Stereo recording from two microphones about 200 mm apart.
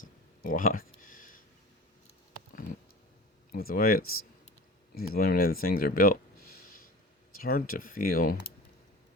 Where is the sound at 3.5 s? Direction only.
50° left (ahead or behind).